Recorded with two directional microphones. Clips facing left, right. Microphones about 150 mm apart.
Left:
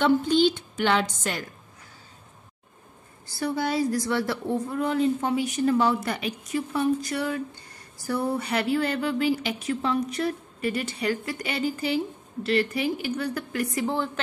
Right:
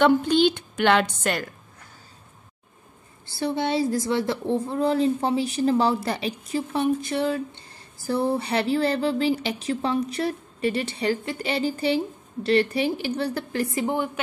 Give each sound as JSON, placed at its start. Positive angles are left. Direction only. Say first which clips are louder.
{"t": 0.0, "sound": "a woman's voice", "louder": "right 2 dB", "side_deg": -65}
{"t": 3.3, "sound": "a woman's voice", "louder": "right 2 dB", "side_deg": -25}